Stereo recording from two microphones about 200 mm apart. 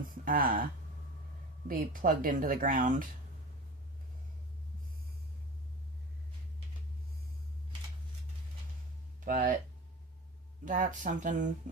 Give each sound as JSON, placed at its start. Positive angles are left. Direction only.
{"t": 0.3, "sound": "speech", "side_deg": -45}
{"t": 9.2, "sound": "speech", "side_deg": -40}
{"t": 10.7, "sound": "speech", "side_deg": -40}